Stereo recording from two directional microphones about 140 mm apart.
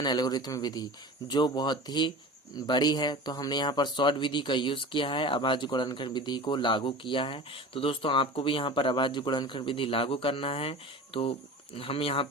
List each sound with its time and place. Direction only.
0.0 s speech: 30° left (ahead or behind)